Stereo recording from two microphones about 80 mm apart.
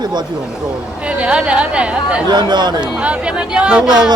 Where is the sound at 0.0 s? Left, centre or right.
Right.